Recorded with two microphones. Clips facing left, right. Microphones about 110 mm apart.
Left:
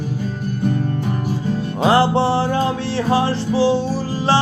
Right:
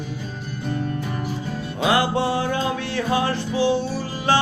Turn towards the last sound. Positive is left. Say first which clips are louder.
# left 4 dB
turn(degrees=35)  # may be behind; listen again after turning